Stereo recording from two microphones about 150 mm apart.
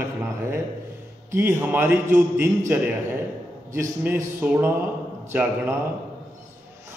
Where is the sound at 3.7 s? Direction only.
15° right (ahead or behind).